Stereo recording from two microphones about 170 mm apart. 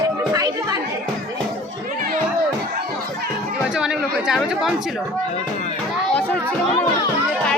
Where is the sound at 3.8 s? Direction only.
5° right (ahead or behind).